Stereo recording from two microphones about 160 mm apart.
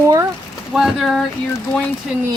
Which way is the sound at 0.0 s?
20° right (ahead or behind).